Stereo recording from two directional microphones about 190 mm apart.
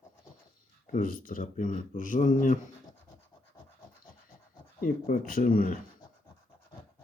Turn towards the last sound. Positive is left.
turn(degrees=50)  # may be behind; listen again after turning